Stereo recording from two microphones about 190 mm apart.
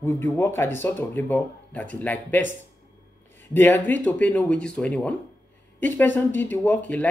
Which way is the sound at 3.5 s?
10° left (ahead or behind).